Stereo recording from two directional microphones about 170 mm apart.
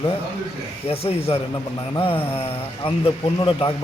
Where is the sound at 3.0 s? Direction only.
30° left (ahead or behind).